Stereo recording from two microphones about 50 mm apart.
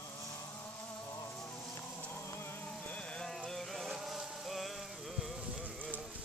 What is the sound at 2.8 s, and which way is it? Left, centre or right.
Vehicle, left.